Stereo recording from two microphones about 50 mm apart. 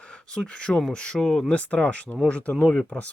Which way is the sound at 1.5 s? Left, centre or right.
Left.